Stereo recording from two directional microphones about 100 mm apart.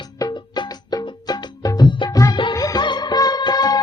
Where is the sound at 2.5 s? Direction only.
40° left (ahead or behind).